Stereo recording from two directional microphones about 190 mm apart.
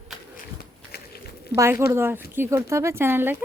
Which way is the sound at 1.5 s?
15° right (ahead or behind).